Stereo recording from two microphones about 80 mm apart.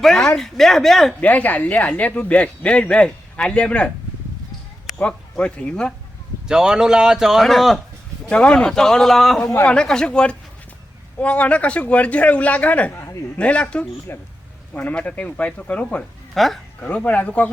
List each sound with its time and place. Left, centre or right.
0.0 s speech: centre
1.2 s speech: centre
4.9 s speech: centre
6.5 s speech: centre
8.3 s speech: centre
12.9 s a man's voice: left
13.4 s speech: centre
14.1 s speech: left
14.7 s speech: centre
16.3 s speech: centre
16.8 s speech: centre